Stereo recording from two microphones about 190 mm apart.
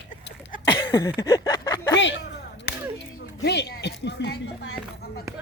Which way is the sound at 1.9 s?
70° left (ahead or behind).